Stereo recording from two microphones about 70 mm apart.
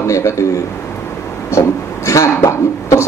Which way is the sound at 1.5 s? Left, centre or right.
Left.